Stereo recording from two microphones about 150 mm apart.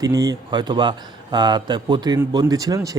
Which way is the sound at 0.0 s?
25° right (ahead or behind).